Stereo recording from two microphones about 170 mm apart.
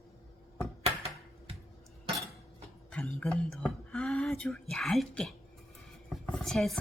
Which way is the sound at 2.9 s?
5° left (ahead or behind).